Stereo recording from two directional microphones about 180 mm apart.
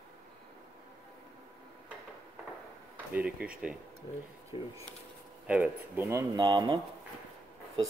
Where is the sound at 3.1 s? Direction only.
5° right (ahead or behind).